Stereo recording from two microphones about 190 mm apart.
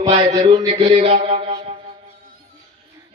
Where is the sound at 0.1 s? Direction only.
35° right (ahead or behind).